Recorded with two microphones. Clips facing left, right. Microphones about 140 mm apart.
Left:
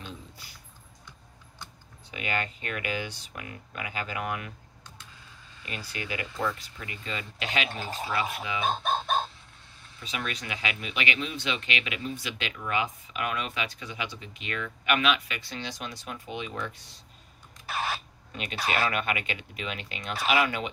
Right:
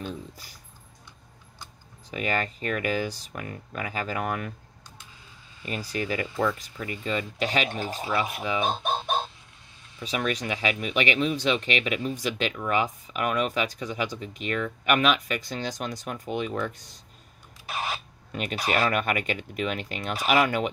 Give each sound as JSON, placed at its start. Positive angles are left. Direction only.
{"t": 0.0, "sound": "a sound", "side_deg": -40}
{"t": 2.0, "sound": "speech", "side_deg": -40}
{"t": 5.7, "sound": "speech", "side_deg": -40}
{"t": 8.6, "sound": "chicken", "side_deg": -15}
{"t": 10.0, "sound": "speech", "side_deg": -40}
{"t": 17.6, "sound": "a sound", "side_deg": -15}
{"t": 18.3, "sound": "speech", "side_deg": -50}